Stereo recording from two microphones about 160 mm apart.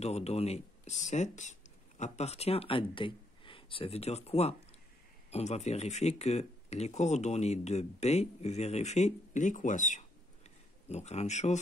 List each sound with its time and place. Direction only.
0.0 s speech: 40° left (ahead or behind)